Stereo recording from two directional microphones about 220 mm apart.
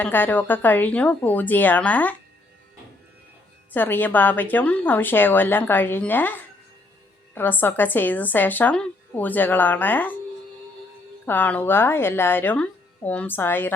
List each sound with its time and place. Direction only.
0.0 s a woman's voice: 10° left (ahead or behind)
3.7 s a woman's voice: 10° left (ahead or behind)
11.3 s a woman's voice: 10° left (ahead or behind)